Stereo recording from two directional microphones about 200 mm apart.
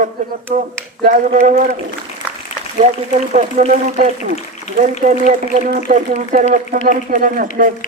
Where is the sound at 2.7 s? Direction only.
35° right (ahead or behind).